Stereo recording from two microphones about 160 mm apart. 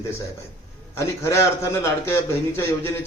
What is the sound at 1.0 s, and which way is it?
Speech, 15° left (ahead or behind).